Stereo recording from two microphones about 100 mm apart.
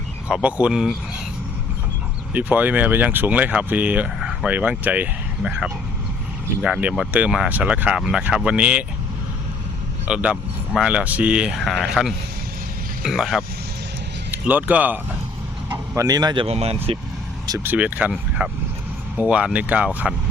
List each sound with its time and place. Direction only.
0.3 s speech: 10° right (ahead or behind)
2.3 s speech: 15° right (ahead or behind)
10.1 s speech: 15° right (ahead or behind)
11.6 s speech: centre (ahead or behind)
14.3 s speech: 15° right (ahead or behind)
16.0 s speech: 40° right (ahead or behind)
16.3 s speech: 75° right (ahead or behind)
17.6 s speech: 15° right (ahead or behind)